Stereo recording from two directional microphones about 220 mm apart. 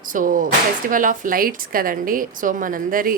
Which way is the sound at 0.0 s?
40° right (ahead or behind).